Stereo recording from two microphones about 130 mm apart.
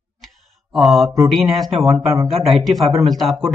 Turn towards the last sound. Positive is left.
turn(degrees=0)  # may be behind; listen again after turning